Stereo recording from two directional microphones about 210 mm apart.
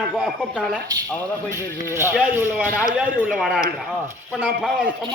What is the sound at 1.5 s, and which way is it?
A man's voice, 15° right (ahead or behind).